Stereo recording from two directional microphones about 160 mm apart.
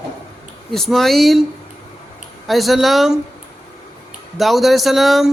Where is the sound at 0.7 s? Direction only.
Centre (ahead or behind).